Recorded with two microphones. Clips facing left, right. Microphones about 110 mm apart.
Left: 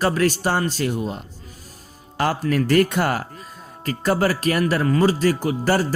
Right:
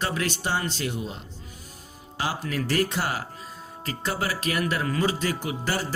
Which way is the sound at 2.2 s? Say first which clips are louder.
Left 8 dB; 55° left (ahead or behind).